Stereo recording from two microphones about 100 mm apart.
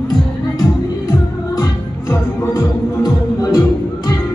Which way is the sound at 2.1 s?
35° left (ahead or behind).